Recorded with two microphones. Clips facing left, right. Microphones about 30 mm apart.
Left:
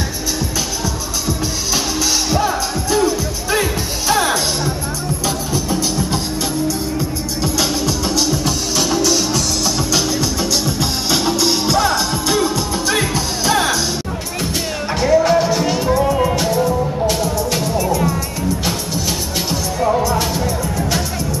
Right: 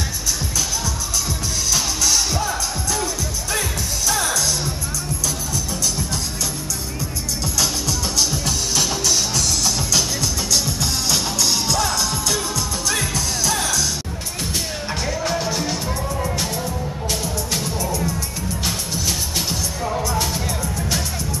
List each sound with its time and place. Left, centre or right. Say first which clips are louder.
2.3 s music: left 6 dB; left
4.1 s music: left 6 dB; left
15.0 s music: left 12 dB; centre
16.0 s music: left 9 dB; left
16.3 s music: left 9 dB; centre
17.8 s music: left 7 dB; left
19.8 s music: left 8 dB; centre